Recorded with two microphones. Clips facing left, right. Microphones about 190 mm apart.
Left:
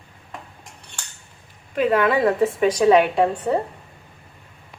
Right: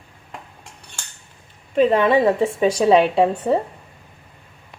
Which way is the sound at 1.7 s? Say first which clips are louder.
Right 3 dB; 25° right (ahead or behind).